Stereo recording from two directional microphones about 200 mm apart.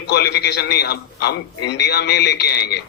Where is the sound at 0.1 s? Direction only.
55° left (ahead or behind).